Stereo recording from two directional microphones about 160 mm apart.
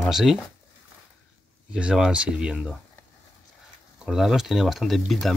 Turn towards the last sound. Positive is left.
turn(degrees=0)  # may be behind; listen again after turning